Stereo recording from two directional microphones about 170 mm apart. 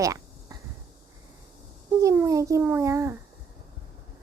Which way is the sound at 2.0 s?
20° right (ahead or behind).